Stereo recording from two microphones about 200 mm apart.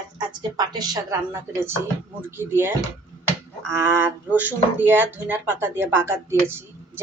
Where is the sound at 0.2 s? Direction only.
20° right (ahead or behind).